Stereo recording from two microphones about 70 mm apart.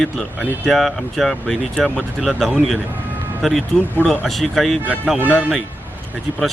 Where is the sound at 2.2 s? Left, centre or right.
Centre.